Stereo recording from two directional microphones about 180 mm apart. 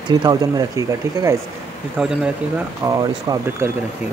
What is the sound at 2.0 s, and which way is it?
Speech, 5° right (ahead or behind).